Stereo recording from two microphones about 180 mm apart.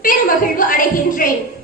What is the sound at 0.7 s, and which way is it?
Speech, 50° left (ahead or behind).